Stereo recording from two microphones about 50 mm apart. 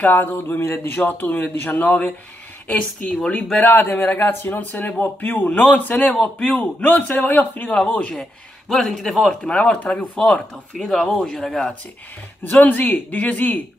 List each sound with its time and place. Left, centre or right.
0.1 s a man's voice: left
0.6 s speech: left
0.9 s a man's voice: left
3.6 s speech: left
4.6 s a man's voice: left
7.9 s speech: left
8.2 s speech: centre
9.4 s speech: centre
10.8 s speech: centre
11.1 s speech: centre
12.4 s a man's voice: left